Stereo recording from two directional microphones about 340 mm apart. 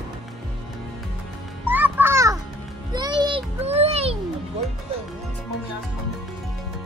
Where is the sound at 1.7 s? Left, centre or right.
Centre.